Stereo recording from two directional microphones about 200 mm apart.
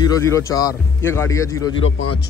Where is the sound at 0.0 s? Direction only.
15° left (ahead or behind).